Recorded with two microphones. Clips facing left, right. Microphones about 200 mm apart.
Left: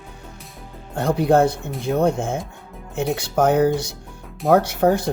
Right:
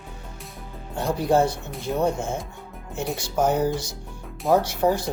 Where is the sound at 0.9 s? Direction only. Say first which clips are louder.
Left 4 dB; 55° left (ahead or behind).